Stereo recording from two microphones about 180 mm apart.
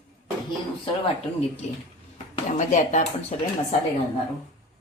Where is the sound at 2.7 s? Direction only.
45° left (ahead or behind).